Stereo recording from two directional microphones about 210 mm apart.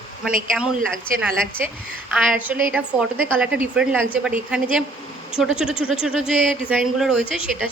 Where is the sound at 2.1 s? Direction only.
5° right (ahead or behind).